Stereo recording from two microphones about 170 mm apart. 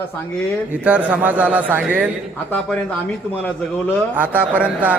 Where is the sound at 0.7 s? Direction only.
10° right (ahead or behind).